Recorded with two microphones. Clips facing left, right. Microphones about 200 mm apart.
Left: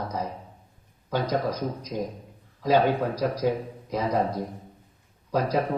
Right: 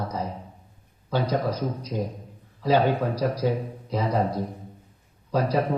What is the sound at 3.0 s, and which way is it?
Speech, 10° left (ahead or behind).